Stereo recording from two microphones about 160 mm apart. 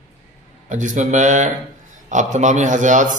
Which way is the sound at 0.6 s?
50° right (ahead or behind).